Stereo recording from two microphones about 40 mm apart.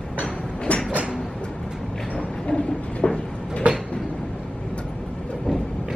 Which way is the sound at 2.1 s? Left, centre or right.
Left.